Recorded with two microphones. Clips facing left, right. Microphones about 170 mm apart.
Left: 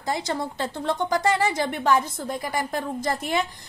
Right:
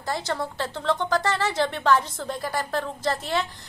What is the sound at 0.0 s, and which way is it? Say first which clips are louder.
A woman's voice: left 1 dB; 15° left (ahead or behind).